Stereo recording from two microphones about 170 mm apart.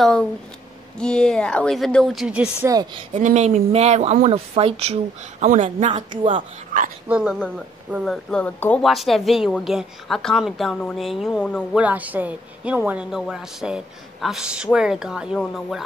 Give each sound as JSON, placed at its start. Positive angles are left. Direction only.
{"t": 0.0, "sound": "a woman's voice", "side_deg": 5}
{"t": 2.7, "sound": "speech", "side_deg": -25}
{"t": 3.1, "sound": "speech", "side_deg": -45}
{"t": 7.1, "sound": "a woman's voice", "side_deg": -5}
{"t": 7.3, "sound": "a woman's voice", "side_deg": 5}